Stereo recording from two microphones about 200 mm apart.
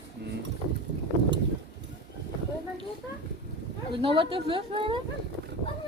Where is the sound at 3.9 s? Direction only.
25° right (ahead or behind).